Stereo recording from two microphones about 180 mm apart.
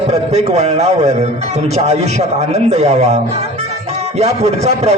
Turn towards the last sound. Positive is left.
turn(degrees=-35)  # may be behind; listen again after turning